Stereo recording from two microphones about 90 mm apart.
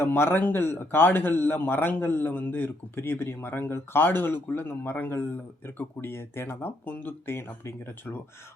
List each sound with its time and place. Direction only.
0.0 s a man's voice: 25° left (ahead or behind)